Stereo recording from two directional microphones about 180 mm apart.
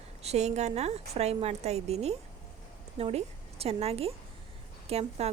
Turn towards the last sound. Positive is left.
turn(degrees=-35)  # may be behind; listen again after turning